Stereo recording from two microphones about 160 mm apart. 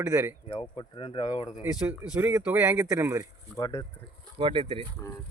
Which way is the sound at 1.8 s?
5° right (ahead or behind).